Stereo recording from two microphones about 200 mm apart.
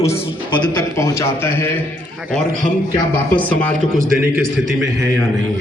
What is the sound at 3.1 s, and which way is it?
Speech, 5° left (ahead or behind).